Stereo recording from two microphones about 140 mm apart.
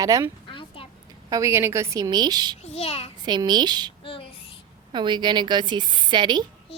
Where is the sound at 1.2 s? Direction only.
25° right (ahead or behind).